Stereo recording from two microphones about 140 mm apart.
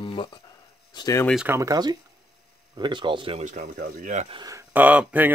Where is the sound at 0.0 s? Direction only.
35° left (ahead or behind).